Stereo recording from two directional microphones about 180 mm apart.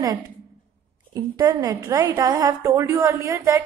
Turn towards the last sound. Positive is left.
turn(degrees=-15)  # may be behind; listen again after turning